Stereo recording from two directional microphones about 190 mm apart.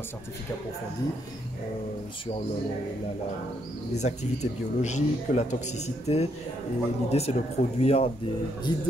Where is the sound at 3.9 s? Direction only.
35° left (ahead or behind).